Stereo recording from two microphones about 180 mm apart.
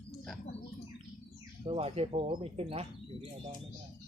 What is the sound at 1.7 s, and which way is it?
Speech, 35° right (ahead or behind).